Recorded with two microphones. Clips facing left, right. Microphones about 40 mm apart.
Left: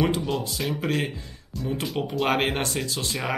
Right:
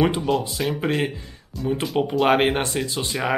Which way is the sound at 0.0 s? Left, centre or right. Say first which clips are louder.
Right 4 dB; centre.